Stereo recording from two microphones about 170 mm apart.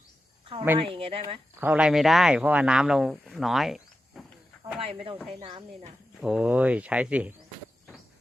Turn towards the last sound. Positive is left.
turn(degrees=-10)  # may be behind; listen again after turning